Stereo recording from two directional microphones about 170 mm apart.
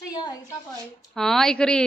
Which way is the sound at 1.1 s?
5° left (ahead or behind).